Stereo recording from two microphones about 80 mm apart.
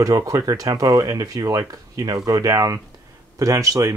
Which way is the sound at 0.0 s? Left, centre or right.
Right.